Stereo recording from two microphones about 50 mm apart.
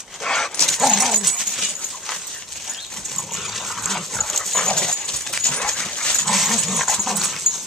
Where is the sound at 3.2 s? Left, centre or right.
Centre.